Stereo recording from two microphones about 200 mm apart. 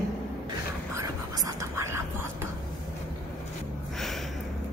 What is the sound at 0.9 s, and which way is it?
Whispering, 15° right (ahead or behind).